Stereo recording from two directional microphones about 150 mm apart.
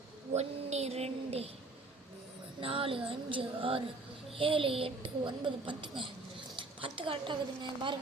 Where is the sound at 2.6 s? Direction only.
35° right (ahead or behind).